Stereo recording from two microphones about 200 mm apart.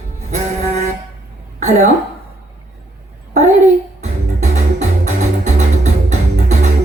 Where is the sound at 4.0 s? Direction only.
35° right (ahead or behind).